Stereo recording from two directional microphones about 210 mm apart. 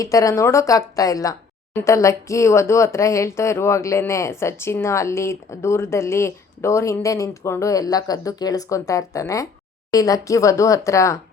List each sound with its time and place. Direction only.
0.0 s speech: 15° left (ahead or behind)